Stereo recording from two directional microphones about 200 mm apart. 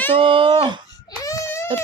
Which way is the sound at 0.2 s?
25° right (ahead or behind).